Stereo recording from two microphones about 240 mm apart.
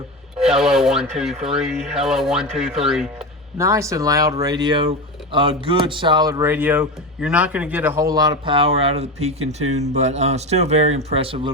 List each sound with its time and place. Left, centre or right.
0.3 s speech: centre
3.7 s speech: centre